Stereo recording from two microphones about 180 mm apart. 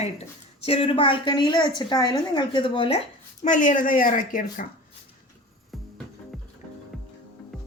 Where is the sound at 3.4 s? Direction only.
45° left (ahead or behind).